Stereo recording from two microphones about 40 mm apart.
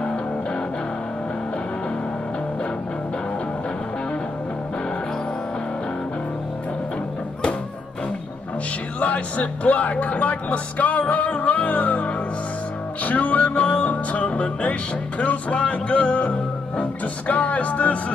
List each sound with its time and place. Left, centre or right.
9.0 s music: left